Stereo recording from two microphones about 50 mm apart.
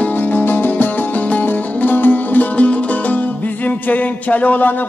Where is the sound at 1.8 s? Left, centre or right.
Left.